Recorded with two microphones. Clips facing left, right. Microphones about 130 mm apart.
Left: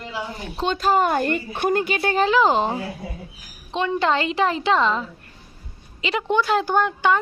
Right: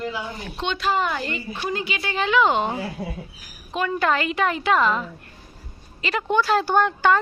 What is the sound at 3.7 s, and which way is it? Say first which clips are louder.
A woman's voice: left 1 dB; 25° left (ahead or behind).